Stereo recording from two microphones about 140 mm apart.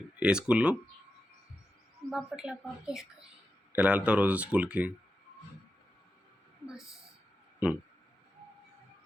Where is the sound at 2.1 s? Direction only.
5° right (ahead or behind).